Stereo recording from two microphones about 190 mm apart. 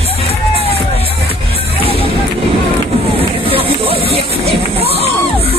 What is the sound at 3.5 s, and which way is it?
Crowd, 30° right (ahead or behind).